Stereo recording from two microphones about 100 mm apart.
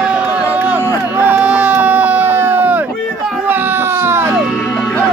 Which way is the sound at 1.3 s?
10° right (ahead or behind).